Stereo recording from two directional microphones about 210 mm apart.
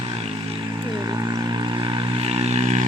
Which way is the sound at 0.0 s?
30° right (ahead or behind).